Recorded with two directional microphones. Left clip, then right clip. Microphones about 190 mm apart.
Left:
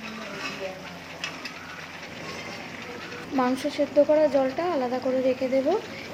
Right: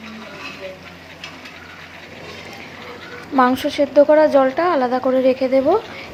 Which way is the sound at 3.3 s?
15° right (ahead or behind).